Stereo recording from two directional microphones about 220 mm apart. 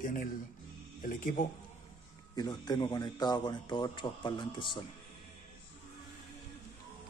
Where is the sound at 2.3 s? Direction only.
20° left (ahead or behind).